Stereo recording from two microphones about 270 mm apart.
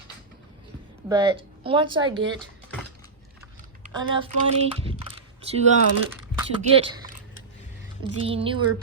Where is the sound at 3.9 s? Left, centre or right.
Centre.